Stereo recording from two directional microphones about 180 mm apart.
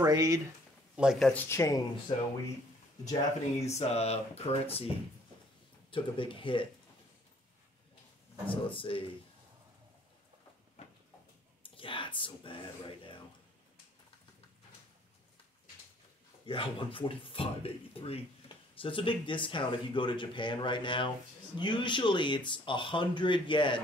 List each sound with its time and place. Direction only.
0.0 s speech: 20° right (ahead or behind)
0.9 s speech: 5° right (ahead or behind)
1.3 s speech: 15° left (ahead or behind)
2.1 s speech: 30° left (ahead or behind)
3.6 s speech: 35° left (ahead or behind)
8.5 s speech: 30° left (ahead or behind)
11.6 s speech: 30° left (ahead or behind)
16.4 s speech: 30° left (ahead or behind)